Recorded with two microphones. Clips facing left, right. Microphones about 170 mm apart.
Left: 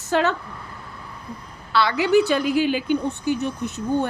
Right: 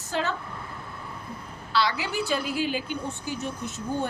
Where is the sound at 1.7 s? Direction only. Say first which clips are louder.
Left 9 dB; 60° left (ahead or behind).